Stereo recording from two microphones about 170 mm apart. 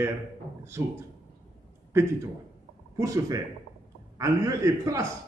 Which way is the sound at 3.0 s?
20° right (ahead or behind).